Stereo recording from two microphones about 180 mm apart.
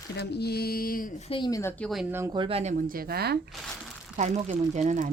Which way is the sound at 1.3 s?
25° left (ahead or behind).